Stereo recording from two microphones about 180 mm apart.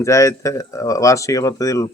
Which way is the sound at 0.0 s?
15° left (ahead or behind).